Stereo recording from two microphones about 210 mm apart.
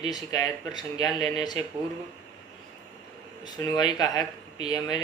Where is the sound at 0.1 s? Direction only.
20° left (ahead or behind).